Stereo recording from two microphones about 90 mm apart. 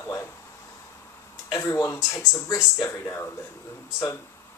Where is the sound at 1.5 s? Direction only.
35° left (ahead or behind).